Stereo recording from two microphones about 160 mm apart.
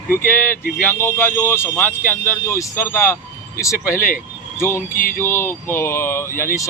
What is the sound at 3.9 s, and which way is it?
Speech, 60° left (ahead or behind).